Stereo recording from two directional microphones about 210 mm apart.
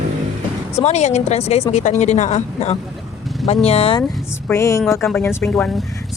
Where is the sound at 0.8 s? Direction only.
30° left (ahead or behind).